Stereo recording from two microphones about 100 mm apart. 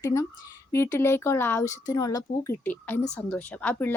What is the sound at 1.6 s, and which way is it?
Speech, 35° left (ahead or behind).